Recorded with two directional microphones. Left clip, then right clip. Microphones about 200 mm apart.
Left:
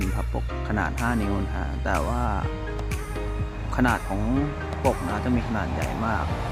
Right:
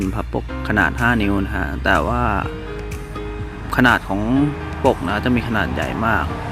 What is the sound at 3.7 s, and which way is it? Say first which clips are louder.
Speech: right 9 dB; 20° right (ahead or behind).